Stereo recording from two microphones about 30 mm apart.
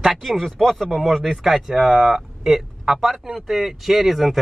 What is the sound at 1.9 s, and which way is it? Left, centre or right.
Speech, centre.